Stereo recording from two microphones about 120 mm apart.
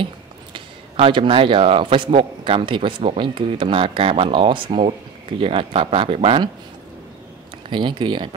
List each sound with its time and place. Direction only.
0.0 s speech: 50° right (ahead or behind)
7.7 s speech: 40° right (ahead or behind)